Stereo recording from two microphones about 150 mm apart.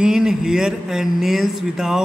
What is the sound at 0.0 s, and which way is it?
A man's voice, 5° right (ahead or behind).